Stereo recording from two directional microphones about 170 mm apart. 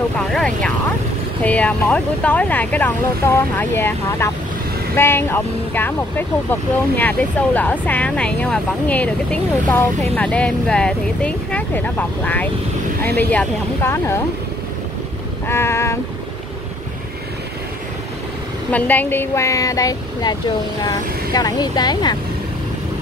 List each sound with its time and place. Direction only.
0.3 s vehicle: 5° left (ahead or behind)
1.4 s speech: 10° left (ahead or behind)
15.4 s speech: 15° left (ahead or behind)
18.7 s speech: 10° left (ahead or behind); by 22.1 s 25° left (ahead or behind)